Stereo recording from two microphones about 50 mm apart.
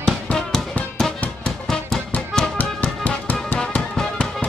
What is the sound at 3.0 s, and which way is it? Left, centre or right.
Music, left.